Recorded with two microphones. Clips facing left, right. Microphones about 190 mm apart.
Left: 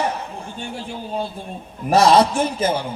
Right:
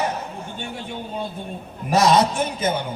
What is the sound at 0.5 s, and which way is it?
A man's voice, 30° left (ahead or behind).